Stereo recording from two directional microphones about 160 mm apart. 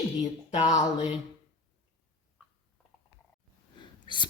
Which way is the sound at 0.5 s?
45° left (ahead or behind).